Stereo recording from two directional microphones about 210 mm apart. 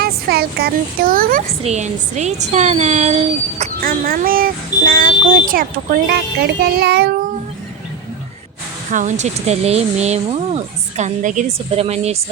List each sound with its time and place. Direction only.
0.0 s a woman's voice: 50° right (ahead or behind); by 3.7 s 30° right (ahead or behind)
3.8 s speech: 45° right (ahead or behind)
8.9 s a woman's voice: 35° right (ahead or behind)